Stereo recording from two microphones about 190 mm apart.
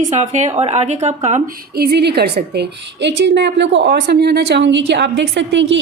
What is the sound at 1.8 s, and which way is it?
A woman's voice, 60° right (ahead or behind).